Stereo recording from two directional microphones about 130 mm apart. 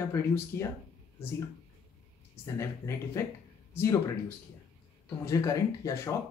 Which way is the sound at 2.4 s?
20° left (ahead or behind).